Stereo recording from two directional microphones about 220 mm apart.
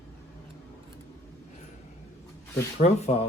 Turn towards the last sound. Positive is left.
turn(degrees=30)  # may be behind; listen again after turning